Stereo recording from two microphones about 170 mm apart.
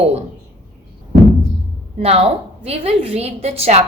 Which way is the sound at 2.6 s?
35° right (ahead or behind).